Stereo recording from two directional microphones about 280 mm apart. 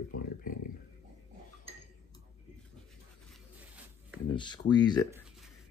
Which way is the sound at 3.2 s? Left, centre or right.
Centre.